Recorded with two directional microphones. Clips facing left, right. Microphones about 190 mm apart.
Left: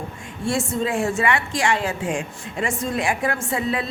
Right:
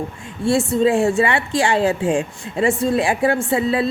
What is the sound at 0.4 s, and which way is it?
A woman's voice, 35° right (ahead or behind).